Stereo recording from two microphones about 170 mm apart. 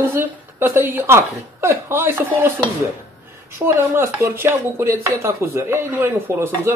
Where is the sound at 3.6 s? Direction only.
15° right (ahead or behind).